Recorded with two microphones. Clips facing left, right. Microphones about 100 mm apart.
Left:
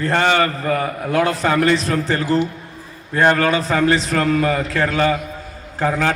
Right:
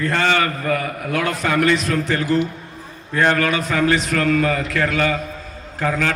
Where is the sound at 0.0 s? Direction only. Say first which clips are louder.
Left 2 dB; 35° left (ahead or behind).